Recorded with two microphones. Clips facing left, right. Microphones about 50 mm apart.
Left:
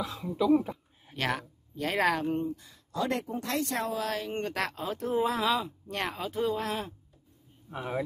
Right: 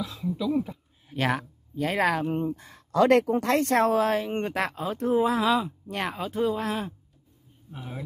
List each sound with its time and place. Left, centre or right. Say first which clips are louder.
0.0 s speech: even; left
1.1 s speech: right 5 dB; centre
2.4 s speech: right 4 dB; right
2.9 s speech: right 11 dB; right
3.5 s speech: right 8 dB; right
4.0 s speech: right 7 dB; right
4.6 s speech: right 4 dB; centre
7.7 s speech: left 6 dB; left